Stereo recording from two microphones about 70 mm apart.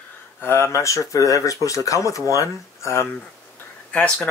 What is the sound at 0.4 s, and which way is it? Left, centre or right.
Speech, left.